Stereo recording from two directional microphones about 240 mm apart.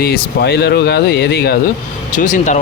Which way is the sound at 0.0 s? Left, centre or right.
Left.